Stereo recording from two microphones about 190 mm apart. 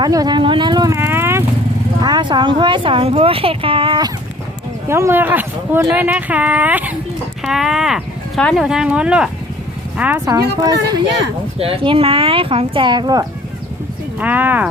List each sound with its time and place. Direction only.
0.0 s speech: 20° right (ahead or behind)
4.9 s speech: 15° right (ahead or behind)
14.2 s speech: 10° right (ahead or behind)